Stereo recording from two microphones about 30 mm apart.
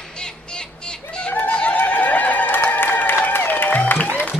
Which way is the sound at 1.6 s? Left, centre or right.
Left.